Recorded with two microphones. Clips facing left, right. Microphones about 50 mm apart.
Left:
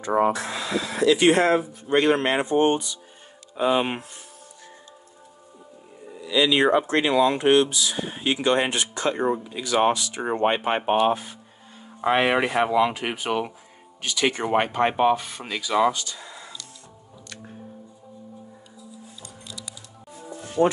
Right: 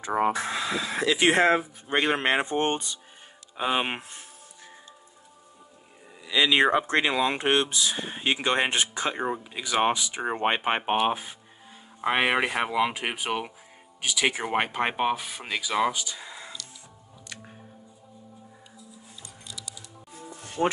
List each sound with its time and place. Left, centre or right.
0.3 s speech: centre; by 3.0 s right
3.5 s speech: centre
6.3 s speech: right
7.3 s speech: right
20.6 s speech: left